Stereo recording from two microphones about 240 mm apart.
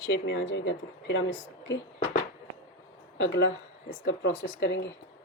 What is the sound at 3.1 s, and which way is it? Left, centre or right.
Speech, left.